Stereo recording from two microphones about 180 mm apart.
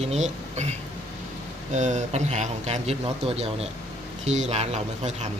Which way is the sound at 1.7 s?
40° right (ahead or behind).